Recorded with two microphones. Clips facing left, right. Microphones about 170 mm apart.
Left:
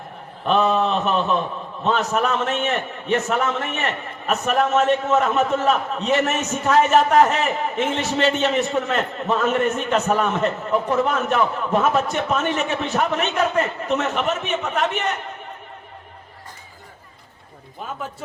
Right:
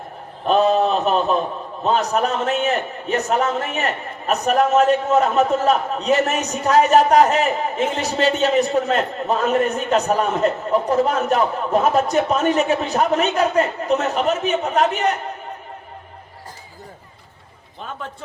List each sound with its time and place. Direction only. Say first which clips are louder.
0.4 s a man's voice: right 3 dB; 35° right (ahead or behind)